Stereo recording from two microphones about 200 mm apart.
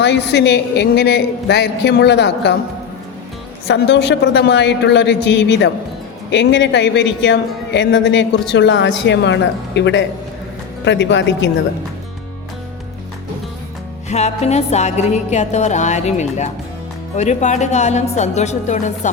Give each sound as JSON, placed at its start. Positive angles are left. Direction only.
{"t": 0.0, "sound": "a man's voice", "side_deg": 60}
{"t": 3.7, "sound": "a man's voice", "side_deg": 60}
{"t": 14.1, "sound": "music", "side_deg": 35}